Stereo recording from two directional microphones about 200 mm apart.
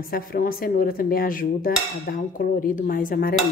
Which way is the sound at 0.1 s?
45° left (ahead or behind).